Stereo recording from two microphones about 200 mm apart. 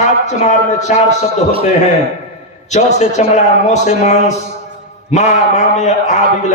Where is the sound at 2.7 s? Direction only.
35° left (ahead or behind).